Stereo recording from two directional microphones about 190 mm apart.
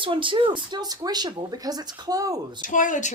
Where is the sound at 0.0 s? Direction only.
25° right (ahead or behind).